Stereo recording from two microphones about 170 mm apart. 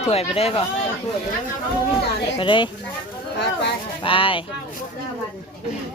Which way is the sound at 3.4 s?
90° left.